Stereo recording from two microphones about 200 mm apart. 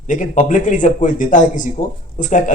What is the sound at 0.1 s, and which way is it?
Speech, 40° left (ahead or behind).